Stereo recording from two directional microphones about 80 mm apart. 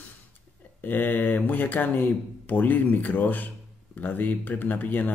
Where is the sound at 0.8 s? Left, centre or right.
Left.